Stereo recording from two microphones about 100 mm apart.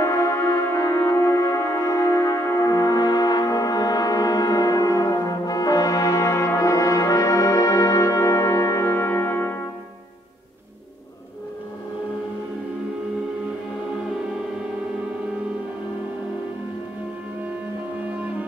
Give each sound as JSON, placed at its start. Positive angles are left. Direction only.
{"t": 0.0, "sound": "music", "side_deg": 30}